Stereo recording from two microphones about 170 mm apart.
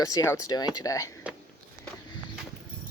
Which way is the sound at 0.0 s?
20° left (ahead or behind).